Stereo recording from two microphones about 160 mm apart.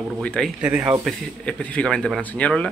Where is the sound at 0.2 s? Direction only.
5° left (ahead or behind).